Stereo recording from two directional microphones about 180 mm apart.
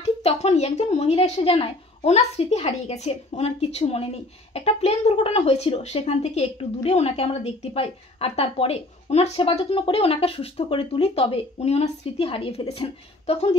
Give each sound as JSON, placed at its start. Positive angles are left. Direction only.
{"t": 0.0, "sound": "speech", "side_deg": 35}